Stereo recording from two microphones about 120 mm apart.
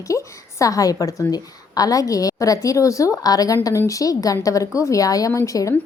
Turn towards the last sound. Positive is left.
turn(degrees=25)  # may be behind; listen again after turning